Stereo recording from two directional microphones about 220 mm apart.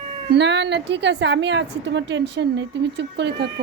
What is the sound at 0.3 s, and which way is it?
A woman's voice, 50° right (ahead or behind).